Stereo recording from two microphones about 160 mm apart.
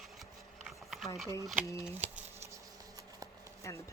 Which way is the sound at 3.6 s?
20° left (ahead or behind).